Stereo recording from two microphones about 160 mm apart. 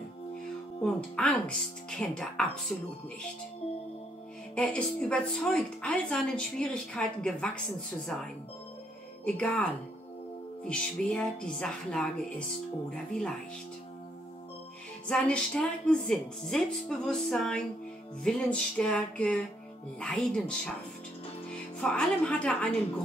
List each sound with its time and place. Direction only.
0.8 s a woman's voice: 5° left (ahead or behind)
4.6 s a woman's voice: 5° left (ahead or behind)
15.0 s a woman's voice: 5° left (ahead or behind)